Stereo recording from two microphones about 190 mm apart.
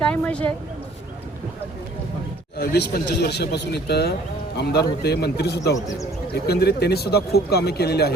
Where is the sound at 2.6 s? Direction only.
60° left (ahead or behind).